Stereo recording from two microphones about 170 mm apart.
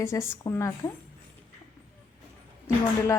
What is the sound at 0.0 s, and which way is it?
Speech, 15° left (ahead or behind).